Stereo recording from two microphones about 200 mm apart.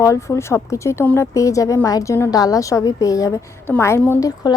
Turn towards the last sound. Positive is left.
turn(degrees=15)  # may be behind; listen again after turning